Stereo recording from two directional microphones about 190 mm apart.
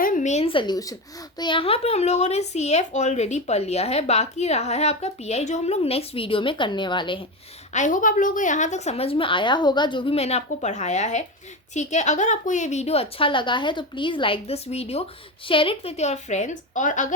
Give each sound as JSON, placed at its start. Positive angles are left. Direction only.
{"t": 0.0, "sound": "a woman's voice", "side_deg": 40}
{"t": 7.7, "sound": "speech", "side_deg": 40}